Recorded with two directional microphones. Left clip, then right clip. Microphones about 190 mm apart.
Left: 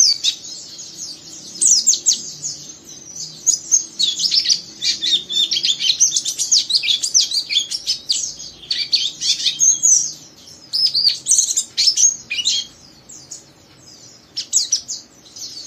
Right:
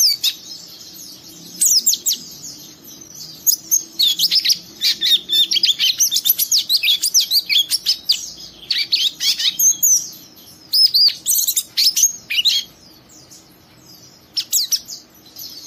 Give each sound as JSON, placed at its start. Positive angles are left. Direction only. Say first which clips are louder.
{"t": 0.2, "sound": "bird", "louder": "even", "side_deg": -35}
{"t": 1.6, "sound": "bird", "louder": "left 1 dB", "side_deg": -35}
{"t": 4.0, "sound": "bird", "louder": "right 4 dB", "side_deg": -35}
{"t": 7.2, "sound": "chirp", "louder": "right 2 dB", "side_deg": -35}
{"t": 8.6, "sound": "bird", "louder": "right 1 dB", "side_deg": -35}
{"t": 10.7, "sound": "chirp", "louder": "right 3 dB", "side_deg": -35}
{"t": 14.3, "sound": "chirp", "louder": "even", "side_deg": -35}